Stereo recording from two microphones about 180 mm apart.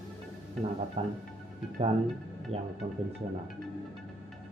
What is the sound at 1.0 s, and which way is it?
Speech, 35° right (ahead or behind).